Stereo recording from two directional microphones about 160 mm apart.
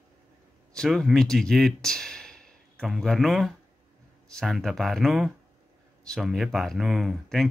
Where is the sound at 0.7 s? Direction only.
5° left (ahead or behind).